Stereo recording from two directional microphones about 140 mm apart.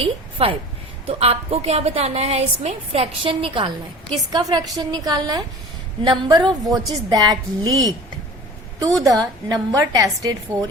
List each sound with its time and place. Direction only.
0.4 s a woman's voice: 45° right (ahead or behind); by 7.9 s 25° right (ahead or behind)
9.0 s a woman's voice: 25° right (ahead or behind)